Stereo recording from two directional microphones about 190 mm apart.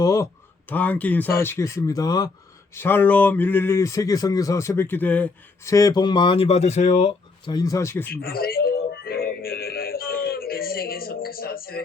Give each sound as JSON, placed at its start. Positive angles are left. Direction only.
{"t": 0.0, "sound": "speech", "side_deg": 15}
{"t": 8.1, "sound": "music", "side_deg": 55}